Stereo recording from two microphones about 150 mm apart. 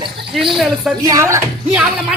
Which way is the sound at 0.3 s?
Centre (ahead or behind).